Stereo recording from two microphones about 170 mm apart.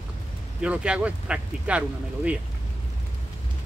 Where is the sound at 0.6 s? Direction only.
5° right (ahead or behind).